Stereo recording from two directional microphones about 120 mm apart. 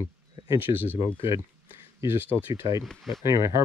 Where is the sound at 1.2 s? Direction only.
25° right (ahead or behind).